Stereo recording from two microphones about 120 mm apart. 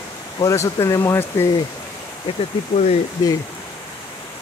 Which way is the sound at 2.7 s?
70° left (ahead or behind).